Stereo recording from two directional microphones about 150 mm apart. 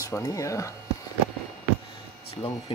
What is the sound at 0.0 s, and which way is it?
Speech, 20° left (ahead or behind).